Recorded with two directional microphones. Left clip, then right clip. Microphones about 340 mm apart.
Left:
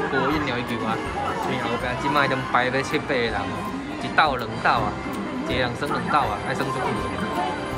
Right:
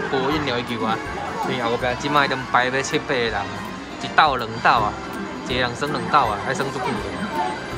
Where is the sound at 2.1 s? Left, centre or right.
Centre.